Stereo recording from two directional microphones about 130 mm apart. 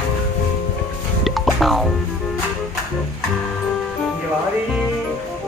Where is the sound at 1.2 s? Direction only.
Centre (ahead or behind).